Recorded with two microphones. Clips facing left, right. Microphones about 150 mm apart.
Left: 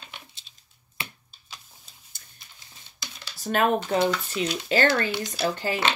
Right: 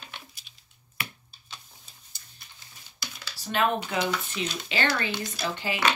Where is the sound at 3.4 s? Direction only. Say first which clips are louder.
Left 3 dB; 45° left (ahead or behind).